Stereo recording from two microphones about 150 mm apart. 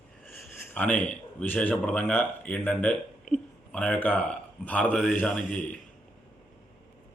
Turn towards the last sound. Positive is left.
turn(degrees=10)  # may be behind; listen again after turning